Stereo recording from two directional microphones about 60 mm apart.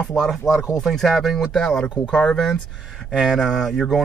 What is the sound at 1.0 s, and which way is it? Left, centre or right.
Speech, centre.